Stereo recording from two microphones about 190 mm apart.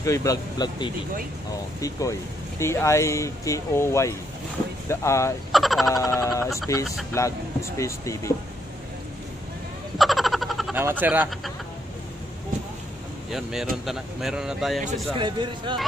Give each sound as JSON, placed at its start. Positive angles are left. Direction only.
{"t": 0.0, "sound": "speech", "side_deg": 15}
{"t": 5.5, "sound": "speech", "side_deg": 0}
{"t": 5.9, "sound": "speech", "side_deg": 20}
{"t": 9.9, "sound": "frog", "side_deg": 0}
{"t": 10.8, "sound": "speech", "side_deg": -10}
{"t": 13.3, "sound": "speech", "side_deg": 0}
{"t": 15.1, "sound": "speech", "side_deg": -25}